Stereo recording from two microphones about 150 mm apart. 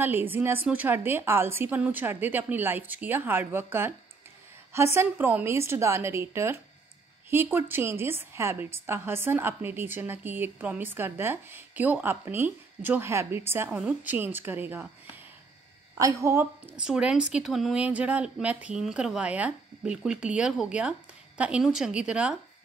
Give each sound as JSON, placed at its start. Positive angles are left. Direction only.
{"t": 0.0, "sound": "a woman's voice", "side_deg": -15}
{"t": 16.0, "sound": "a woman's voice", "side_deg": -20}